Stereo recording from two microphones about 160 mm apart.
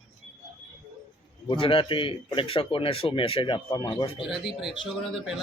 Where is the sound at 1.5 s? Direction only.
30° left (ahead or behind).